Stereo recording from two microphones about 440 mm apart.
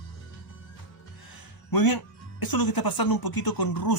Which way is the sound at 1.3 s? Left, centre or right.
Left.